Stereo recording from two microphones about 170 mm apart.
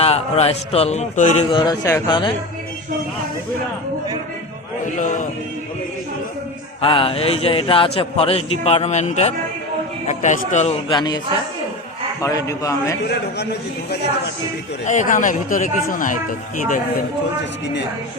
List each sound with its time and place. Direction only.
0.0 s a man's voice: 35° left (ahead or behind)
1.5 s a man's voice: 20° left (ahead or behind)
4.9 s speech: 50° left (ahead or behind)
6.8 s a man's voice: 30° left (ahead or behind)
10.8 s a man's voice: 25° left (ahead or behind)
12.2 s a man's voice: 20° left (ahead or behind)
13.1 s a man's voice: 75° left (ahead or behind)
14.8 s speech: 50° left (ahead or behind)